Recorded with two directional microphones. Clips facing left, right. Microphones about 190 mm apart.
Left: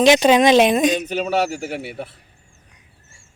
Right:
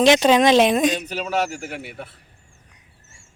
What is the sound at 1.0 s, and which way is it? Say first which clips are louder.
Speech: left 4 dB; 35° left (ahead or behind).